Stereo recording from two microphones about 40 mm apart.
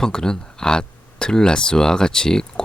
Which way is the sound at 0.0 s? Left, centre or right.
Centre.